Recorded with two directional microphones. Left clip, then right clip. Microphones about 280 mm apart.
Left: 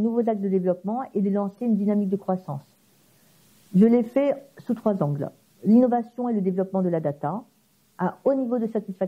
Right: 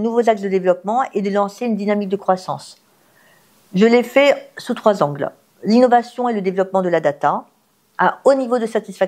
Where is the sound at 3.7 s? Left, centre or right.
Centre.